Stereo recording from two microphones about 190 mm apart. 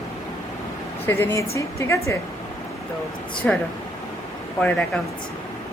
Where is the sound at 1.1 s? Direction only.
10° left (ahead or behind).